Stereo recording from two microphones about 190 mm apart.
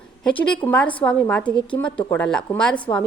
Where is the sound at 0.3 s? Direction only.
5° left (ahead or behind).